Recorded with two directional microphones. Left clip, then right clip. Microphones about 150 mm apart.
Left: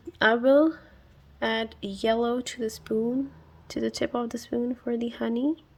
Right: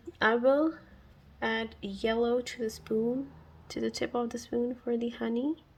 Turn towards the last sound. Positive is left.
turn(degrees=30)  # may be behind; listen again after turning